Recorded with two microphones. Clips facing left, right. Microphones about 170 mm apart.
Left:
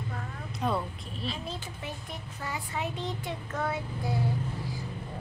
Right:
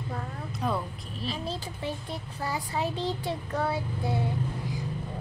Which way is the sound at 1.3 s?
35° right (ahead or behind).